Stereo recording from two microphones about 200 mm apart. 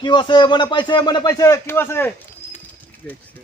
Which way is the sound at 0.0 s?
20° left (ahead or behind).